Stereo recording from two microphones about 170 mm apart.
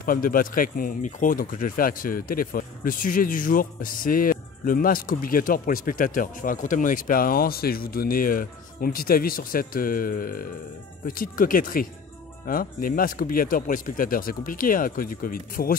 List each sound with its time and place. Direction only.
0.0 s speech: 55° left (ahead or behind)